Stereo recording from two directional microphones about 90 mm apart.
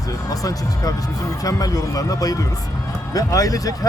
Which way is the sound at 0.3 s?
40° left (ahead or behind).